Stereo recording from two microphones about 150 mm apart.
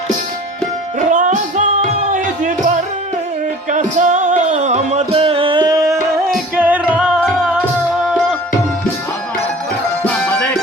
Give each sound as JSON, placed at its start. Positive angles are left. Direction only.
{"t": 0.9, "sound": "music", "side_deg": -60}
{"t": 6.6, "sound": "music", "side_deg": -10}
{"t": 10.0, "sound": "music", "side_deg": 10}